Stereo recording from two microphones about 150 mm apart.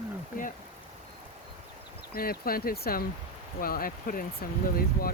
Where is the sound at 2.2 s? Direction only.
80° left.